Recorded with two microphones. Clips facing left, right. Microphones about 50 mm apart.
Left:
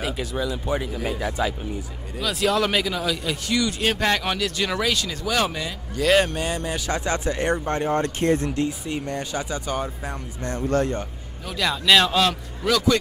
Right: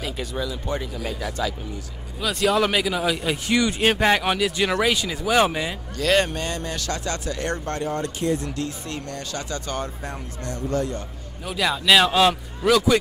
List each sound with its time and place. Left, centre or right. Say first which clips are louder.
0.0 s speech: left 2 dB; centre; by 1.5 s left
2.2 s speech: right 1 dB; centre
3.0 s a man's voice: right 2 dB; right
3.9 s speech: right 3 dB; centre
5.9 s speech: left 2 dB; centre
6.9 s speech: left 5 dB; left
8.0 s speech: left 3 dB; left
8.6 s speech: left 4 dB; centre
10.7 s a man's voice: left 3 dB; left
11.4 s speech: right 1 dB; centre